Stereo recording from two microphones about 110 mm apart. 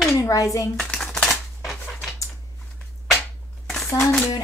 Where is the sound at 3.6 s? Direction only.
Centre (ahead or behind).